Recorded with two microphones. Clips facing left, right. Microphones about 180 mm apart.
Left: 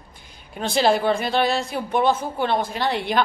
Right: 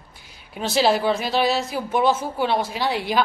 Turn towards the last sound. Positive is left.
turn(degrees=-5)  # may be behind; listen again after turning